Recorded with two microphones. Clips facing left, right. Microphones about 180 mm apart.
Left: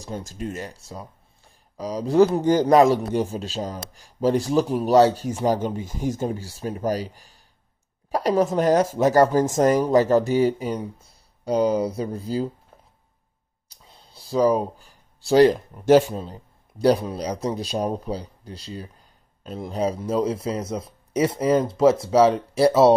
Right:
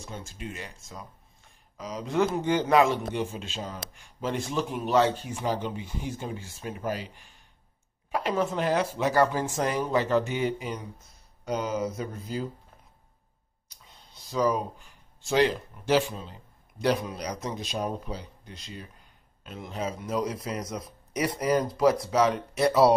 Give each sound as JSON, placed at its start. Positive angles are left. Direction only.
{"t": 0.0, "sound": "speech", "side_deg": 40}
{"t": 13.8, "sound": "speech", "side_deg": 35}